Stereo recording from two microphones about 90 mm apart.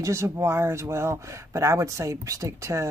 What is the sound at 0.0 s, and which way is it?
Speech, 30° right (ahead or behind).